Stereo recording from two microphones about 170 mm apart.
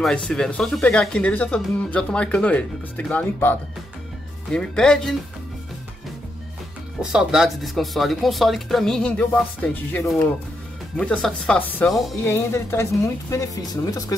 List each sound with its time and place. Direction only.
0.0 s speech: 5° left (ahead or behind)
7.0 s a woman's voice: 5° right (ahead or behind); by 14.1 s 20° left (ahead or behind)